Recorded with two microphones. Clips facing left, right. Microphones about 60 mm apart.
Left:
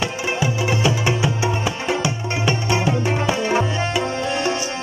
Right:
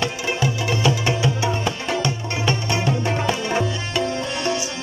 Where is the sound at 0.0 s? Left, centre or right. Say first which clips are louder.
Left 1 dB; centre.